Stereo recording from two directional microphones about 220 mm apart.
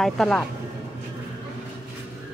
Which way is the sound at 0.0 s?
5° left (ahead or behind).